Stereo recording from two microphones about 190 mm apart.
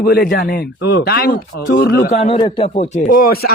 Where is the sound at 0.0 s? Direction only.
50° left (ahead or behind).